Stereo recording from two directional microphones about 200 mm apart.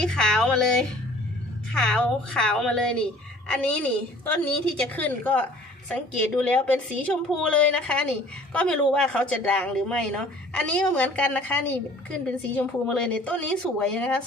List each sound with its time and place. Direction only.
0.0 s a woman's voice: centre (ahead or behind)